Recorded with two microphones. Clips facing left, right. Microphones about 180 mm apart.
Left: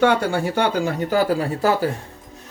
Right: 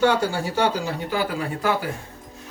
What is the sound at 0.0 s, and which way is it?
Speech, 60° left (ahead or behind).